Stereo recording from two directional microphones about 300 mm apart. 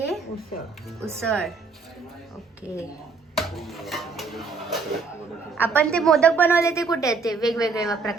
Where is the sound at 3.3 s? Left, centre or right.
Centre.